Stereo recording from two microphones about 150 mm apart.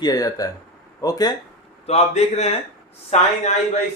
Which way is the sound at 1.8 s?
45° left (ahead or behind).